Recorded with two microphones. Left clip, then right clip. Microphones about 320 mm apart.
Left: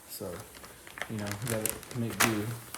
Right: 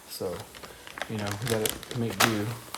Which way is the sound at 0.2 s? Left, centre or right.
Right.